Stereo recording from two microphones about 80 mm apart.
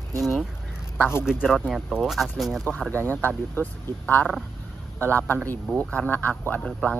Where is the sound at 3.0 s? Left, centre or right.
Left.